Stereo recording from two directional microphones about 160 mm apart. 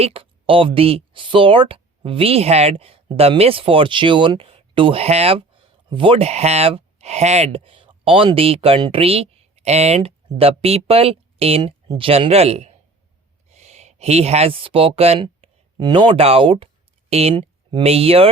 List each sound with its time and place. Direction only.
0.0 s speech: 35° right (ahead or behind)